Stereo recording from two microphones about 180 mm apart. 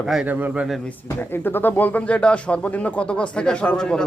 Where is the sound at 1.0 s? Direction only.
10° left (ahead or behind).